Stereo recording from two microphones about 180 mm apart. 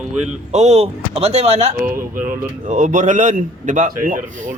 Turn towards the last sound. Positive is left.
turn(degrees=-45)  # may be behind; listen again after turning